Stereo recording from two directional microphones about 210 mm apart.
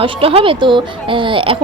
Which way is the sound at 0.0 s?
25° right (ahead or behind).